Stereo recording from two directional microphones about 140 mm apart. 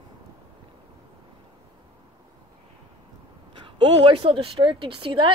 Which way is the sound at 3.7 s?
35° right (ahead or behind).